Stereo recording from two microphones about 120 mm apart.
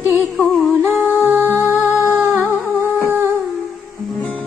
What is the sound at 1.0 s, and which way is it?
Music, 15° right (ahead or behind).